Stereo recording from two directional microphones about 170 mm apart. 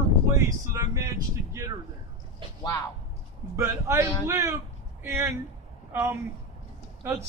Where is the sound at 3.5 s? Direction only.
15° right (ahead or behind).